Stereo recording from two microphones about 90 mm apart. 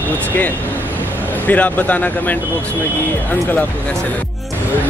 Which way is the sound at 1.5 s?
15° left (ahead or behind).